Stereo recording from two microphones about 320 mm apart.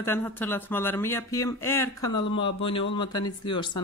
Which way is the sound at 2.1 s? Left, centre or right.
Left.